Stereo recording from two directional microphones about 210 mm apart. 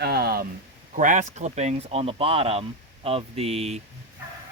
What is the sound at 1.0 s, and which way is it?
Speech, 35° right (ahead or behind).